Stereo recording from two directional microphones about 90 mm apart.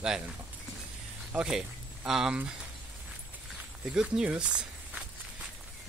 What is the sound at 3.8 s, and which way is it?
Speech, 10° right (ahead or behind).